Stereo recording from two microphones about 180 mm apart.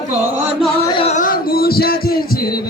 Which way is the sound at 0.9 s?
30° left (ahead or behind).